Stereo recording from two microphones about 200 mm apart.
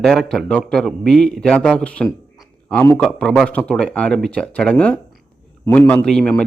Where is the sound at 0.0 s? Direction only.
Centre (ahead or behind).